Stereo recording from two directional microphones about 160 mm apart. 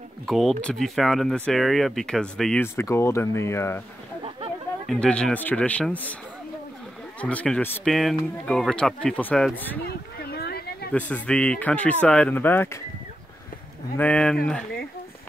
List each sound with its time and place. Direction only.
0.3 s speech: centre (ahead or behind)
2.6 s speech: 15° left (ahead or behind)
4.8 s speech: 5° left (ahead or behind)
7.2 s speech: 10° left (ahead or behind)
10.3 s a sound: 75° left (ahead or behind)
10.9 s speech: 10° left (ahead or behind)
13.9 s speech: 5° left (ahead or behind)